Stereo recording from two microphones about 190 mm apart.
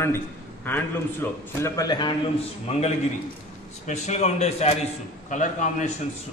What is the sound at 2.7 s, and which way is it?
A man's voice, 35° left (ahead or behind).